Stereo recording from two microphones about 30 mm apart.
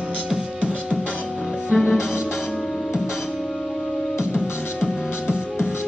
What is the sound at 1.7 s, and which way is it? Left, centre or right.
Music, centre.